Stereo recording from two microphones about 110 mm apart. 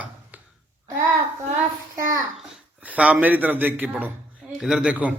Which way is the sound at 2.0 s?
30° right (ahead or behind).